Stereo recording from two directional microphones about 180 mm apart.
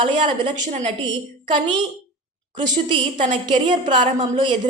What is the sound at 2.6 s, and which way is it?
A woman's voice, 25° right (ahead or behind).